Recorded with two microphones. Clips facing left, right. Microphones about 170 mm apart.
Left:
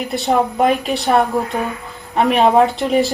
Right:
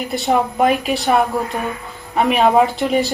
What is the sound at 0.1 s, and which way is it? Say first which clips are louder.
Speech: left 1 dB; centre (ahead or behind).